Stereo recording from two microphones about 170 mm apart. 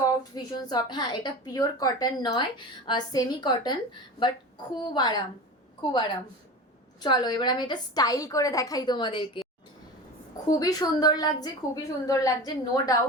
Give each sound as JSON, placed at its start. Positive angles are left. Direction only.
{"t": 0.0, "sound": "a woman's voice", "side_deg": 25}
{"t": 7.0, "sound": "a woman's voice", "side_deg": 25}
{"t": 10.6, "sound": "a woman's voice", "side_deg": 20}